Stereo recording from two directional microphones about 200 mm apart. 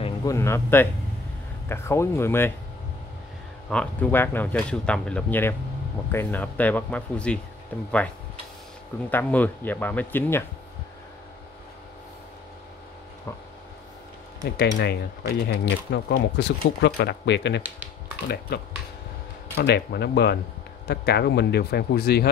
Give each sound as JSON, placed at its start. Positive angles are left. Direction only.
{"t": 0.0, "sound": "speech", "side_deg": 15}
{"t": 3.7, "sound": "speech", "side_deg": 5}
{"t": 9.1, "sound": "speech", "side_deg": 10}
{"t": 14.4, "sound": "speech", "side_deg": 55}
{"t": 19.5, "sound": "a man's voice", "side_deg": 55}